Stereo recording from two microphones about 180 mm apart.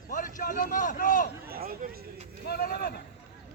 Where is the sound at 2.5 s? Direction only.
60° left (ahead or behind).